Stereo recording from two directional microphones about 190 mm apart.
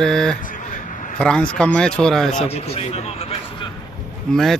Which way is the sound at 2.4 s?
35° left (ahead or behind).